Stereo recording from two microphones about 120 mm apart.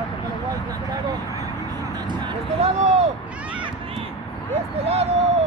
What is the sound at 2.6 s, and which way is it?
Vehicle, 70° right (ahead or behind).